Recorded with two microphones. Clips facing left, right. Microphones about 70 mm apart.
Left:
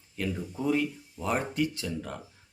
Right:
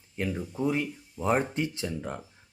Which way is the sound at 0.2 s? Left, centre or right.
Right.